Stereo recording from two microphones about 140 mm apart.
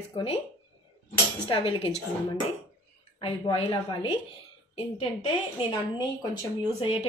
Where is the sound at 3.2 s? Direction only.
40° left (ahead or behind).